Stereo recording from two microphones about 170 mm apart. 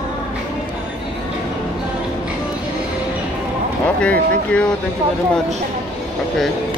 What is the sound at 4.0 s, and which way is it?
Speech, 5° left (ahead or behind).